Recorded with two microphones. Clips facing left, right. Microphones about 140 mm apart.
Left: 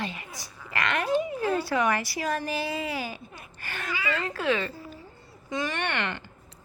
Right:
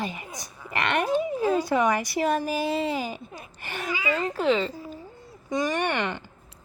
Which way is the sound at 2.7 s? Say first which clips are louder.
Right 5 dB; 25° right (ahead or behind).